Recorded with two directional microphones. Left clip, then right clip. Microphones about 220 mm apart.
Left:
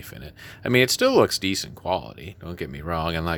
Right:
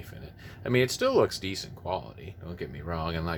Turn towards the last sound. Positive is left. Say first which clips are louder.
# left 7 dB
turn(degrees=45)  # may be behind; listen again after turning